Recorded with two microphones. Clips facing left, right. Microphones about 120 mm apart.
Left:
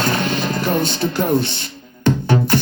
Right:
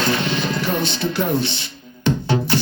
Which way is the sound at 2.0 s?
45° left (ahead or behind).